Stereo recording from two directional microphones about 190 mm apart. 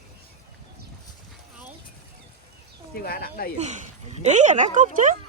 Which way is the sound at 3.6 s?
40° right (ahead or behind).